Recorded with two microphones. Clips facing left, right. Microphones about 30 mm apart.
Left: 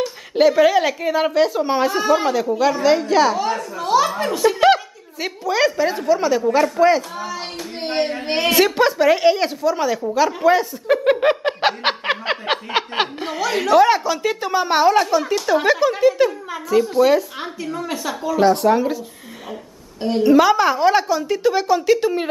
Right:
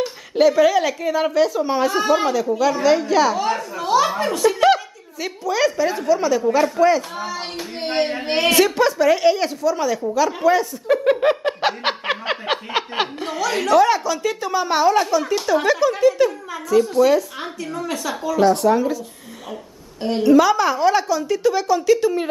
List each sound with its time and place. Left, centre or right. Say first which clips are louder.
0.3 s a woman's voice: left 1 dB; centre
1.9 s a woman's voice: even; centre
7.0 s speech: even; centre
10.1 s chuckle: left 2 dB; centre
13.7 s a woman's voice: left 2 dB; centre
20.2 s a woman's voice: left 1 dB; centre